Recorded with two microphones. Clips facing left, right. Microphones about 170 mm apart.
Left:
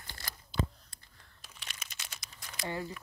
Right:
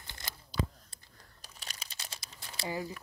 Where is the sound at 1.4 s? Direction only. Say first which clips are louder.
Right 1 dB; 40° right (ahead or behind).